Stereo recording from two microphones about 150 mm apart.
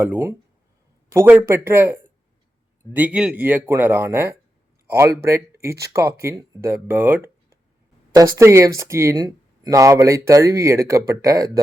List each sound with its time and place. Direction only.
0.0 s speech: 15° right (ahead or behind)